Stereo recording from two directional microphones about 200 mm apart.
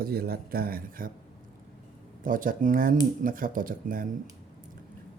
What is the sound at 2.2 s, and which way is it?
Speech, 45° right (ahead or behind).